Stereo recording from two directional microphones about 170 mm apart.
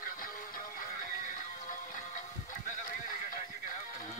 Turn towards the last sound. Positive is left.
turn(degrees=50)  # may be behind; listen again after turning